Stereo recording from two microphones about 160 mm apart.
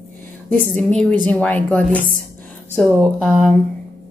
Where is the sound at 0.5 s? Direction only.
60° right (ahead or behind).